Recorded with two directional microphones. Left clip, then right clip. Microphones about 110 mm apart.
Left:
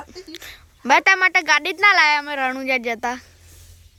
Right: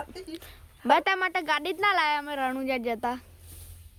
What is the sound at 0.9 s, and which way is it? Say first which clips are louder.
A woman's voice: left 8 dB; 30° left (ahead or behind).